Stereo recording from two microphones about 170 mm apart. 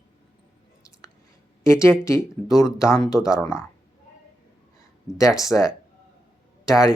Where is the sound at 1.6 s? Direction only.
15° left (ahead or behind).